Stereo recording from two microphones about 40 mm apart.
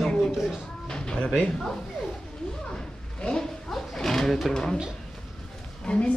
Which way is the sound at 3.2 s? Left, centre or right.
Left.